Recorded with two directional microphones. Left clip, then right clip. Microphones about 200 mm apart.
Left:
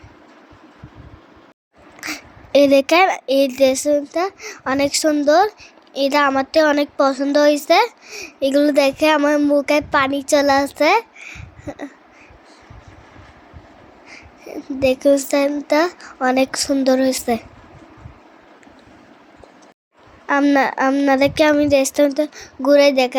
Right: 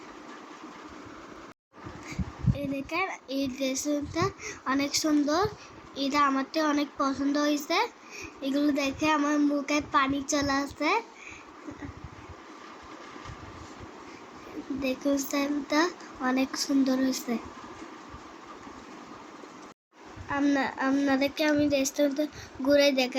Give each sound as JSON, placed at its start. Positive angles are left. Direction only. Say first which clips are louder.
{"t": 2.0, "sound": "speech", "louder": "left 10 dB", "side_deg": 55}
{"t": 14.8, "sound": "speech", "louder": "left 15 dB", "side_deg": 45}
{"t": 20.2, "sound": "speech", "louder": "left 12 dB", "side_deg": 45}